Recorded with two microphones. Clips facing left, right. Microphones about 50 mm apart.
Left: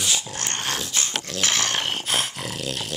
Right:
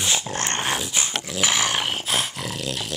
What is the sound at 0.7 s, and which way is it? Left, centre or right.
Dog, centre.